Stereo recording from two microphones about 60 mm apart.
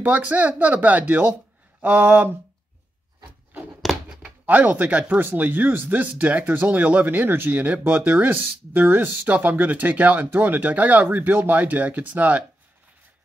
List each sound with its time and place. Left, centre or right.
0.0 s speech: right
1.8 s a sound: right
4.1 s speech: right
7.5 s speech: right